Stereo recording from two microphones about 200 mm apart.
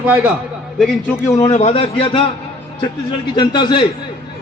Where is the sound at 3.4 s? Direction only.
25° left (ahead or behind).